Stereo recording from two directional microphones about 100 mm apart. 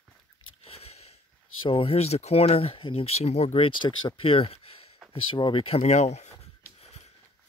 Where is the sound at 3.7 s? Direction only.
55° left (ahead or behind); by 4.9 s 75° left (ahead or behind).